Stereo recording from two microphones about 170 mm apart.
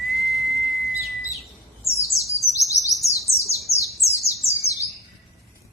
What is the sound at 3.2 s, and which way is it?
Bird, 20° left (ahead or behind).